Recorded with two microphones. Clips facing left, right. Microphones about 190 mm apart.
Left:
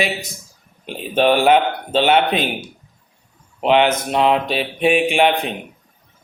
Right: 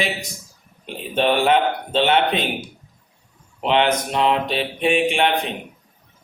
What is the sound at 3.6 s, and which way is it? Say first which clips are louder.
Mantra: left 3 dB; 10° left (ahead or behind).